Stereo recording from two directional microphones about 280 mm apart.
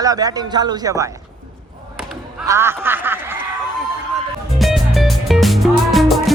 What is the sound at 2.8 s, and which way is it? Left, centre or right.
Snicker, centre.